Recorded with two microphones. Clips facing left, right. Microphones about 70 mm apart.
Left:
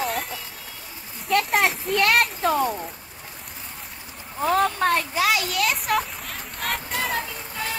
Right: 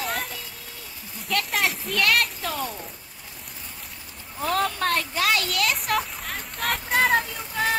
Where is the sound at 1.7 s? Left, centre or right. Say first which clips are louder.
Left 3 dB; centre.